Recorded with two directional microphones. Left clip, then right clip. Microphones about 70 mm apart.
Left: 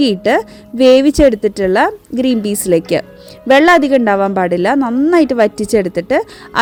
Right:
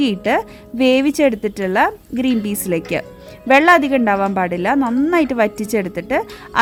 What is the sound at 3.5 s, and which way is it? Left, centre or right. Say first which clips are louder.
A woman's voice: left 3 dB; left.